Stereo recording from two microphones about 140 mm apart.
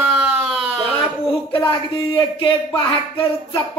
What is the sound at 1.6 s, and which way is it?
Speech, 35° left (ahead or behind).